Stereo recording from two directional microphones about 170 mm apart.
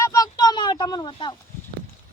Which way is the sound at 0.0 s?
20° left (ahead or behind).